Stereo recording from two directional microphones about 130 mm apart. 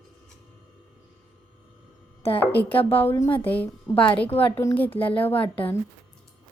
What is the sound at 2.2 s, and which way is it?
Speech, 45° left (ahead or behind).